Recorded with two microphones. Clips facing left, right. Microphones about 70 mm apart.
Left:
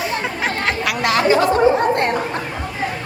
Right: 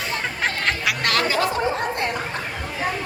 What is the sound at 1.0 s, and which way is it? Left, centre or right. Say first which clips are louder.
Chatter: left 7 dB; centre.